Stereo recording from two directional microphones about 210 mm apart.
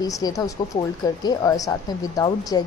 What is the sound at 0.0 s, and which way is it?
A woman's voice, 15° left (ahead or behind).